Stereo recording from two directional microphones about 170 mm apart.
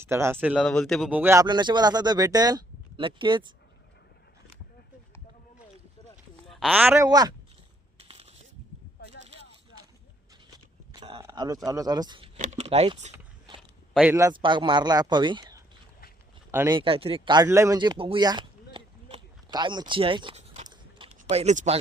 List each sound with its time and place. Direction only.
0.0 s speech: 15° right (ahead or behind)
0.6 s speech: 5° left (ahead or behind)
1.1 s speech: 15° right (ahead or behind)
6.5 s speech: centre (ahead or behind); by 7.3 s 20° right (ahead or behind)
7.9 s a sound: 35° right (ahead or behind)
10.9 s a sound: 30° right (ahead or behind)
11.2 s speech: 25° right (ahead or behind)
12.4 s speech: 45° right (ahead or behind)
13.6 s a sound: centre (ahead or behind)
14.1 s speech: 20° right (ahead or behind)
16.7 s speech: 30° right (ahead or behind)
20.7 s a sound: 35° right (ahead or behind)